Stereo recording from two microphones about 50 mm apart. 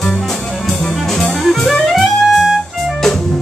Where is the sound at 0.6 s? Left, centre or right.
Centre.